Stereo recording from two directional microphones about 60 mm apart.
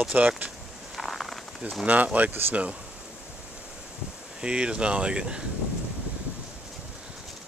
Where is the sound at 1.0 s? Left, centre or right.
Centre.